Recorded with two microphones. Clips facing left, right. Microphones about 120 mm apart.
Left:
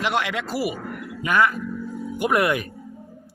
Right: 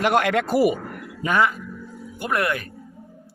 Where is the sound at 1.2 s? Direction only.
25° right (ahead or behind).